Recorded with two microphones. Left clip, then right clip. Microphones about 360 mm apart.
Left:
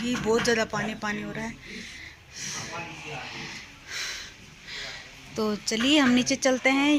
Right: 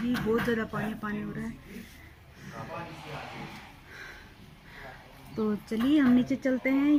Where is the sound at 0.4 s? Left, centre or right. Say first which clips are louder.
Left 6 dB; left.